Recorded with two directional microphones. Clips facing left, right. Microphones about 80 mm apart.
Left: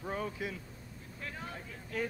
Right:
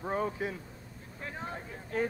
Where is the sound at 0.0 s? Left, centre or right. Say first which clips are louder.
Right 5 dB; right.